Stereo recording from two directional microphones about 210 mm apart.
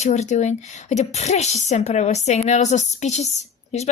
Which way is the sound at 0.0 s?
35° left (ahead or behind).